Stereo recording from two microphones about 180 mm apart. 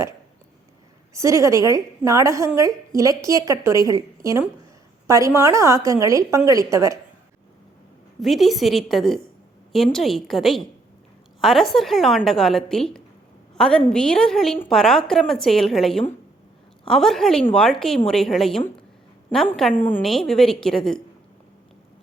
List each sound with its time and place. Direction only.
1.1 s a woman's voice: 15° right (ahead or behind)
8.2 s a woman's voice: centre (ahead or behind)